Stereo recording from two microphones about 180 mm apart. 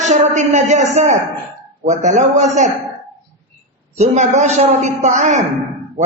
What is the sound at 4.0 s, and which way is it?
A man's voice, 40° right (ahead or behind).